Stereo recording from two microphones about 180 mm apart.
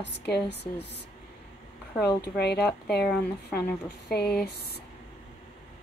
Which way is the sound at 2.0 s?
65° left (ahead or behind).